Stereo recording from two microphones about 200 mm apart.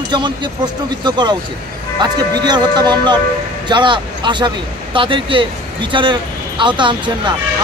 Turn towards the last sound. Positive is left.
turn(degrees=-25)  # may be behind; listen again after turning